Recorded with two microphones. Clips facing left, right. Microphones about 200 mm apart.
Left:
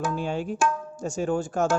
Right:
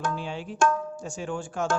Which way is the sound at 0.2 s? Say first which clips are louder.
Left 1 dB; 45° left (ahead or behind).